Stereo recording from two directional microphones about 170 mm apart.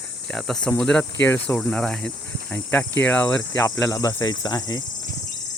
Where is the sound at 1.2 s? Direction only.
10° left (ahead or behind).